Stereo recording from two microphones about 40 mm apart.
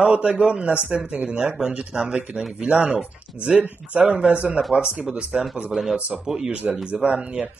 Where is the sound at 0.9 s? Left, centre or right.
Right.